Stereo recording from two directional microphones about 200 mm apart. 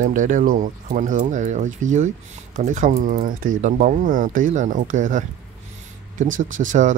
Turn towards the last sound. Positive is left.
turn(degrees=-40)  # may be behind; listen again after turning